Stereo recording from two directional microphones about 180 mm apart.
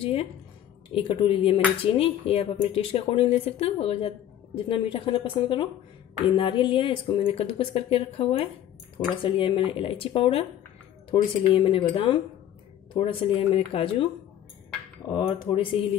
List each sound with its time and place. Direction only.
0.0 s a woman's voice: 30° left (ahead or behind)
15.1 s speech: 25° left (ahead or behind)